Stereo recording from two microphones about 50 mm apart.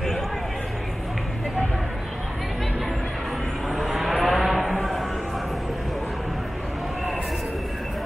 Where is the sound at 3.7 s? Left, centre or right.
Centre.